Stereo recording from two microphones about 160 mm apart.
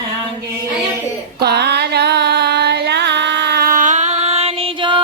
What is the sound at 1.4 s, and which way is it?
Music, 90° right.